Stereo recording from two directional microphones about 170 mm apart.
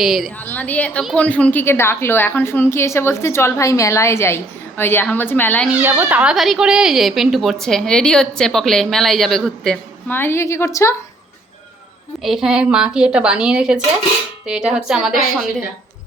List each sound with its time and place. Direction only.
0.0 s a woman's voice: centre (ahead or behind)
0.3 s a woman's voice: 10° left (ahead or behind)
5.6 s a woman's voice: 10° right (ahead or behind)
10.2 s a woman's voice: 15° left (ahead or behind)
12.2 s a woman's voice: centre (ahead or behind)